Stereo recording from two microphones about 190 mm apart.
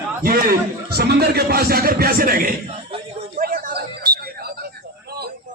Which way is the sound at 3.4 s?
50° right (ahead or behind).